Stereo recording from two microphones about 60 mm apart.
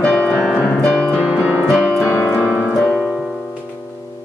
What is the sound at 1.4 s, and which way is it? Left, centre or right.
Piano, right.